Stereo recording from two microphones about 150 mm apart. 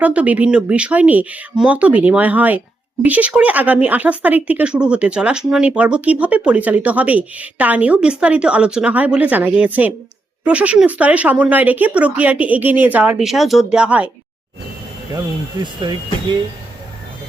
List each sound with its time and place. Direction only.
0.0 s speech: 10° right (ahead or behind)
15.6 s speech: 30° right (ahead or behind)